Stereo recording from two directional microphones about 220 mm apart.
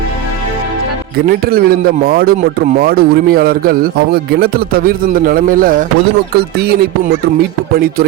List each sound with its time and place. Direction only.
1.3 s speech: 45° right (ahead or behind)